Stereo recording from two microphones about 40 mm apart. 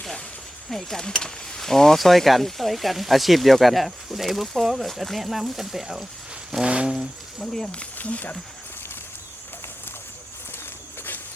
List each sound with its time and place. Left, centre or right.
0.7 s speech: centre
6.7 s a sound: right
6.9 s speech: centre
7.9 s speech: left